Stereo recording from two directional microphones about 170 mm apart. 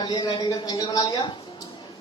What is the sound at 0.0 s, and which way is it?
Speech, 25° left (ahead or behind).